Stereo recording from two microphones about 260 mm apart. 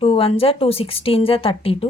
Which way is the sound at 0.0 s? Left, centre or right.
Left.